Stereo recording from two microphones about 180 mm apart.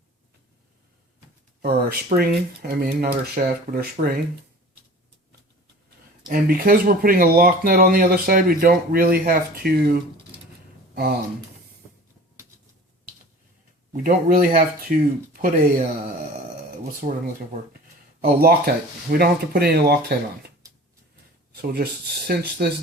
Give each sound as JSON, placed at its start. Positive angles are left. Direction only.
{"t": 1.6, "sound": "speech", "side_deg": -55}
{"t": 6.2, "sound": "speech", "side_deg": -55}
{"t": 13.9, "sound": "speech", "side_deg": -50}
{"t": 17.0, "sound": "speech", "side_deg": -45}
{"t": 18.3, "sound": "speech", "side_deg": -55}
{"t": 21.5, "sound": "speech", "side_deg": -60}